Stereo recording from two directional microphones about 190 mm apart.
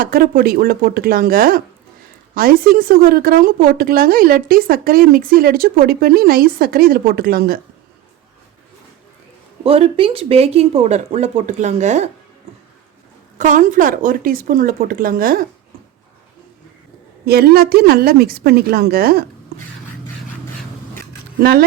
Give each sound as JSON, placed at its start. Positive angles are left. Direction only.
{"t": 0.0, "sound": "a woman's voice", "side_deg": -50}
{"t": 9.6, "sound": "speech", "side_deg": -30}
{"t": 13.4, "sound": "a woman's voice", "side_deg": -40}
{"t": 17.2, "sound": "a woman's voice", "side_deg": -55}